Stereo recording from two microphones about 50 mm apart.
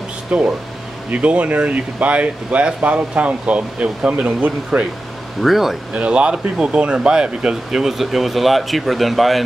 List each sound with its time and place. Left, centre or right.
0.3 s speech: right
5.4 s speech: centre
5.9 s speech: right; by 9.4 s centre